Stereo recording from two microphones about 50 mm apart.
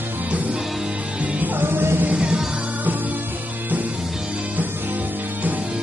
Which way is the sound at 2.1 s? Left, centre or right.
Right.